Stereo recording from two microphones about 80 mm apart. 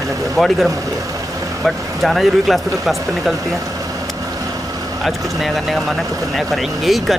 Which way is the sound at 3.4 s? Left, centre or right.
Right.